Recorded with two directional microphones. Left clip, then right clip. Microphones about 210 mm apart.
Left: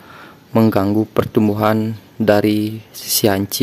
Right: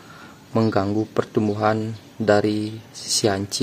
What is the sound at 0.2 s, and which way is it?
Speech, 35° left (ahead or behind).